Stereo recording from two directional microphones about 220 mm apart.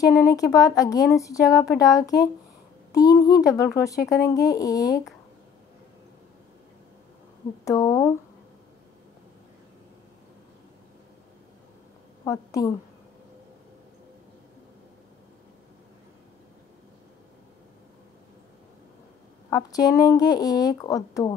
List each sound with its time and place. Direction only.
0.0 s speech: 15° left (ahead or behind)
7.6 s speech: 15° left (ahead or behind)
12.3 s speech: 15° left (ahead or behind)
19.7 s speech: 15° left (ahead or behind)